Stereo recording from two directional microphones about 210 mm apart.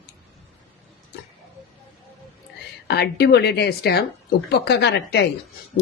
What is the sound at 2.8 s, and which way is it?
Speech, 50° left (ahead or behind).